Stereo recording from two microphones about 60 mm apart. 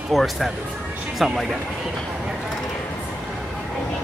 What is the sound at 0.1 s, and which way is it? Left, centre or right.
Speech, centre.